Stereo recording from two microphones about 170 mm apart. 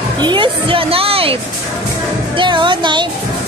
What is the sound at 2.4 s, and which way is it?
Music, 30° right (ahead or behind).